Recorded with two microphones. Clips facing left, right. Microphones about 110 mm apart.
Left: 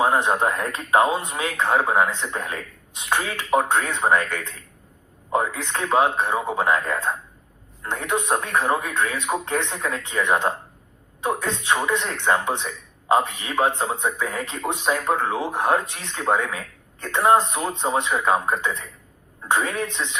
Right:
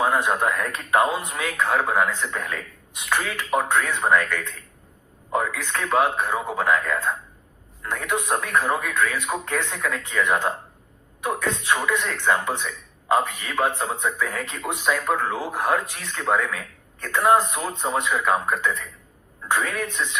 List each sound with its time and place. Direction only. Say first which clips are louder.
0.0 s a man's voice: left 2 dB; 25° left (ahead or behind)